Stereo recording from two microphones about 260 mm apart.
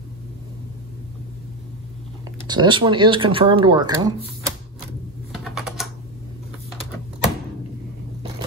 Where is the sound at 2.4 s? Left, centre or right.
Centre.